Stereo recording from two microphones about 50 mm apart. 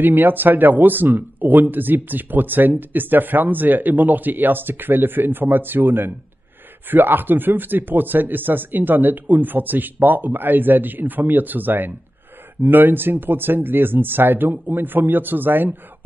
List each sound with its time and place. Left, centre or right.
0.0 s speech: right